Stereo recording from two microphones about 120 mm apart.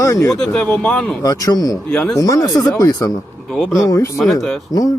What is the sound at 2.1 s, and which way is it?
Speech, 30° left (ahead or behind).